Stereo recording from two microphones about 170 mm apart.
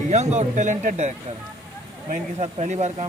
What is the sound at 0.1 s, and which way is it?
Speech, 45° right (ahead or behind).